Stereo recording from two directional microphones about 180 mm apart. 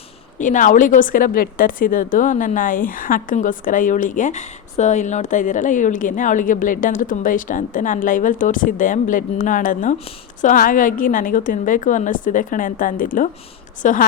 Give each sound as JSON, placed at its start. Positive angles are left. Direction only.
{"t": 0.3, "sound": "a woman's voice", "side_deg": 45}